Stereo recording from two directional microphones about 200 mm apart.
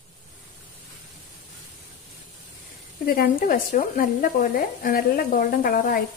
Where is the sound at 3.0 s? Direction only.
50° left (ahead or behind).